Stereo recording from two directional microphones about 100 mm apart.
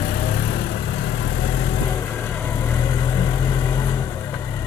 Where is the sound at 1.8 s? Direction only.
35° left (ahead or behind).